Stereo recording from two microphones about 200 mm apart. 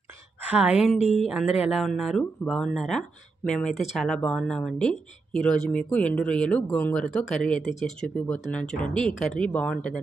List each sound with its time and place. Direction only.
0.4 s a woman's voice: 5° right (ahead or behind)
0.9 s speech: 35° left (ahead or behind)
1.2 s speech: centre (ahead or behind)